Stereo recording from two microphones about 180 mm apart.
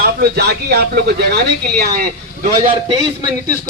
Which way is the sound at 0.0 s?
65° right (ahead or behind).